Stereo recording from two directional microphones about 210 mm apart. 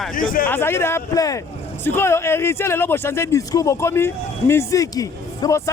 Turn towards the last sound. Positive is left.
turn(degrees=15)  # may be behind; listen again after turning